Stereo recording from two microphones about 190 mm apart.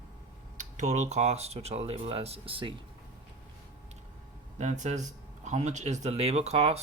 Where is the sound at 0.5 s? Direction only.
40° right (ahead or behind).